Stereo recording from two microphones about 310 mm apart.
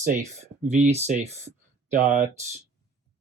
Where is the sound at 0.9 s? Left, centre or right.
Right.